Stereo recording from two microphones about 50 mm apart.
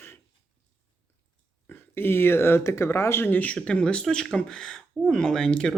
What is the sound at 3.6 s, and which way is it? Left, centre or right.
Speech, centre.